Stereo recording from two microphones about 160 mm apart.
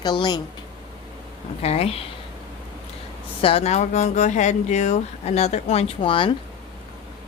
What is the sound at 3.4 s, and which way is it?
Speech, 40° left (ahead or behind).